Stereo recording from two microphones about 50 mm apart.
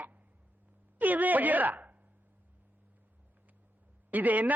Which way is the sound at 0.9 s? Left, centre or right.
Right.